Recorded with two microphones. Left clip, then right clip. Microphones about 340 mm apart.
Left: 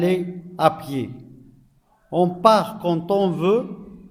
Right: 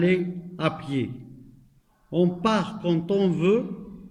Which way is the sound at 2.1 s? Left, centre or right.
Centre.